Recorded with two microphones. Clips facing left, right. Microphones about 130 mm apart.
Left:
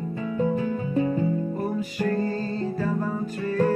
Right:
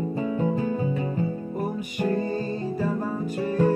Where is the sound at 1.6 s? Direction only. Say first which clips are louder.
Left 1 dB; 15° right (ahead or behind).